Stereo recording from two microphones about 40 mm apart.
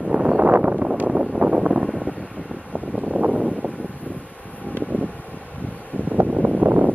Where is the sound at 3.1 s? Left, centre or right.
Right.